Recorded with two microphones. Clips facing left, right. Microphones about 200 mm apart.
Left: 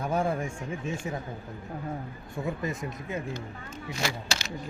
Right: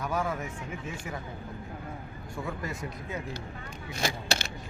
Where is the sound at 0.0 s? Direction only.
30° left (ahead or behind).